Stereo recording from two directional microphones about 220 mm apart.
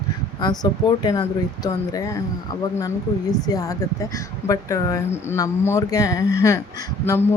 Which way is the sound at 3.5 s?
15° left (ahead or behind).